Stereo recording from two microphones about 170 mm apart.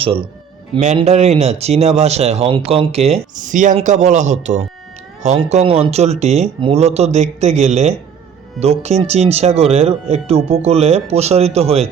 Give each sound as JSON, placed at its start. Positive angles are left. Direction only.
{"t": 0.0, "sound": "a man's voice", "side_deg": -35}